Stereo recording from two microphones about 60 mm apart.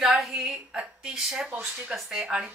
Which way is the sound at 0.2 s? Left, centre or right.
Centre.